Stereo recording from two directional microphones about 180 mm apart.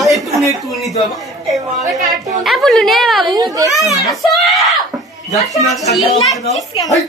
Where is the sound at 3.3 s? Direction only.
20° right (ahead or behind).